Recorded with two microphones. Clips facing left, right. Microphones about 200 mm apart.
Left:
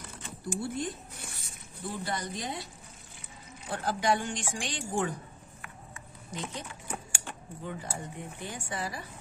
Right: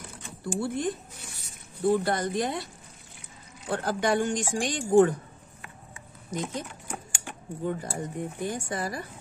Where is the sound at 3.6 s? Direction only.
55° right (ahead or behind).